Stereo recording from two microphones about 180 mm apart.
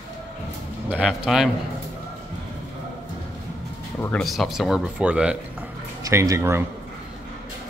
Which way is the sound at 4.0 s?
10° left (ahead or behind).